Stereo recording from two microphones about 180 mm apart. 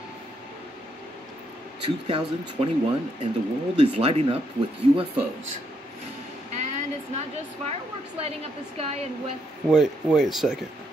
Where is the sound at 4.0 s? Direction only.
30° right (ahead or behind).